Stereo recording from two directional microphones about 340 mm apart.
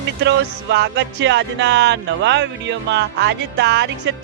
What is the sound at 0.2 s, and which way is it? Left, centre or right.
Music, right.